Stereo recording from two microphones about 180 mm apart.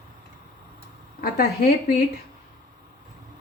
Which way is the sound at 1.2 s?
55° left (ahead or behind).